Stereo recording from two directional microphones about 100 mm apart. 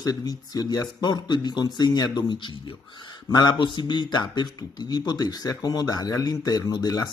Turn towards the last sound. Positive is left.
turn(degrees=40)  # may be behind; listen again after turning